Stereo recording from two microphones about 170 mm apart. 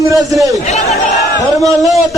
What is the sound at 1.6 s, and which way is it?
Speech, 20° right (ahead or behind).